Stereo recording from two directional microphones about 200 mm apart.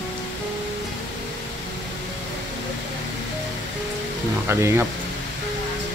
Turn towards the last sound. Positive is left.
turn(degrees=-10)  # may be behind; listen again after turning